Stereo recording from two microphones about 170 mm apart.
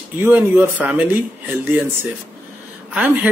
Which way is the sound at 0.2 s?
10° right (ahead or behind).